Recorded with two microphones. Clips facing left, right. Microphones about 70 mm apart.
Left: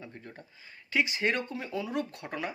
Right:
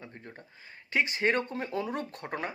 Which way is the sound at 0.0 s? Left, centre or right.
Right.